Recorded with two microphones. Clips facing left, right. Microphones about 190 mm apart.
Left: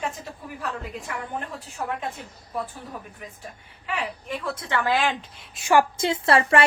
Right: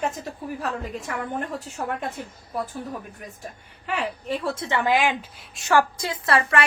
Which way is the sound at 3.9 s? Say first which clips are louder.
Right 3 dB; 40° right (ahead or behind).